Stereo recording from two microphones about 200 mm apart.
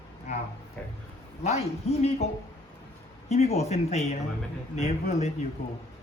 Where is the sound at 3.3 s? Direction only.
30° left (ahead or behind).